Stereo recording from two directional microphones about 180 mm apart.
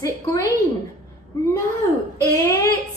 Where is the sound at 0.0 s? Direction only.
20° left (ahead or behind).